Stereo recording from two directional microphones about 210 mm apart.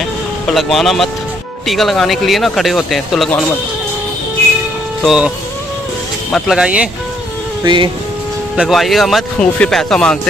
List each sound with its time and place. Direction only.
0.6 s speech: centre (ahead or behind)
5.0 s speech: 5° right (ahead or behind)
6.3 s speech: centre (ahead or behind)
7.6 s speech: 20° right (ahead or behind)
8.5 s speech: centre (ahead or behind)